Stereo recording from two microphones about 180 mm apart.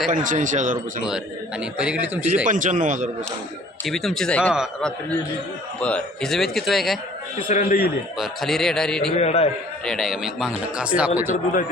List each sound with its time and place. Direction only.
0.1 s speech: 45° right (ahead or behind)
1.0 s a man's voice: 5° right (ahead or behind)
2.5 s speech: 45° right (ahead or behind)
3.8 s speech: centre (ahead or behind)
4.5 s speech: 5° right (ahead or behind)
7.3 s a man's voice: 50° left (ahead or behind)
8.2 s speech: centre (ahead or behind)
9.1 s a man's voice: 35° left (ahead or behind)
9.8 s speech: centre (ahead or behind)